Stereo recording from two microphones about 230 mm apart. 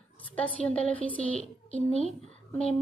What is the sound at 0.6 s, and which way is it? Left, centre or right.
Speech, centre.